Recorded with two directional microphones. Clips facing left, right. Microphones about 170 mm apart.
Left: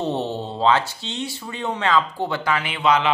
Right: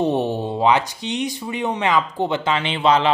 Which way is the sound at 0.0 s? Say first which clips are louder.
Right 4 dB; 15° right (ahead or behind).